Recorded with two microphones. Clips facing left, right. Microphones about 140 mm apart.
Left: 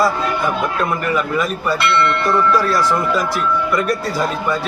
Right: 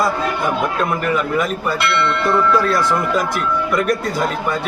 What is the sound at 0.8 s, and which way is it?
Speech, 20° right (ahead or behind).